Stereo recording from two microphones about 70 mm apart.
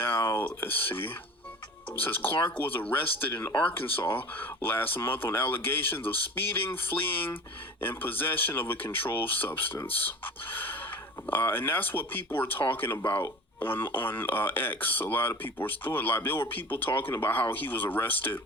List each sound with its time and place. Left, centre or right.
0.0 s a sound: left
2.0 s speech: left
3.5 s speech: centre
3.8 s speech: left